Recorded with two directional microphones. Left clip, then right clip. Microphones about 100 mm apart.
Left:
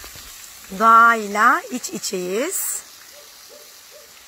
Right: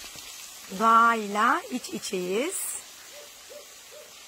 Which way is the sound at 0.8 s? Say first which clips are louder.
Left 8 dB; 35° left (ahead or behind).